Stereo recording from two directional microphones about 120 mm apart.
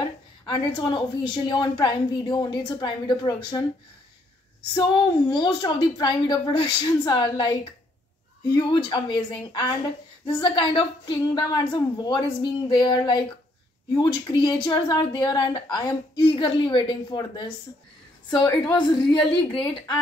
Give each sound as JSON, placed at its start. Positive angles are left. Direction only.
{"t": 0.5, "sound": "a woman's voice", "side_deg": 40}
{"t": 4.7, "sound": "a woman's voice", "side_deg": 40}